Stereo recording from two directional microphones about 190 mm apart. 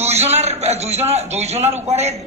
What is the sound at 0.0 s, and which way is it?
A man's voice, 35° right (ahead or behind).